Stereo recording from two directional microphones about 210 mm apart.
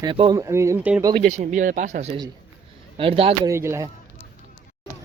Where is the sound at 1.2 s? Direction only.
35° right (ahead or behind).